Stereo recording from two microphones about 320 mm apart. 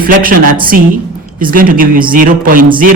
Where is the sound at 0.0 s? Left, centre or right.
Right.